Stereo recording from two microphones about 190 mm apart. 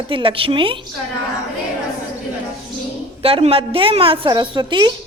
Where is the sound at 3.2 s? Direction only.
30° right (ahead or behind).